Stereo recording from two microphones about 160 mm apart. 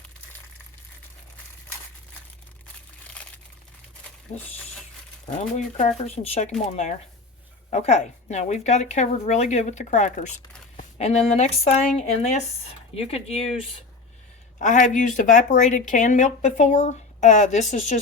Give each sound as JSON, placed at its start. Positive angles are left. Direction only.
{"t": 3.1, "sound": "crumpling", "side_deg": 5}
{"t": 5.2, "sound": "speech", "side_deg": 45}
{"t": 7.7, "sound": "speech", "side_deg": 45}
{"t": 14.6, "sound": "speech", "side_deg": 50}